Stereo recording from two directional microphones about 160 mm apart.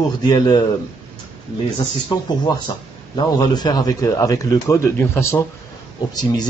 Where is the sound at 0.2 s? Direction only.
25° left (ahead or behind).